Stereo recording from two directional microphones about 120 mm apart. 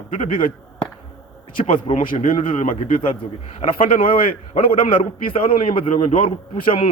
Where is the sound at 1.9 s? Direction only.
50° left (ahead or behind).